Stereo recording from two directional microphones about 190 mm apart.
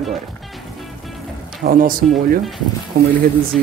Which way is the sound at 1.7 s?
45° right (ahead or behind).